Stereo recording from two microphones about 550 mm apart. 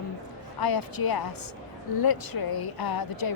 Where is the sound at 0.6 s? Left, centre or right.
Left.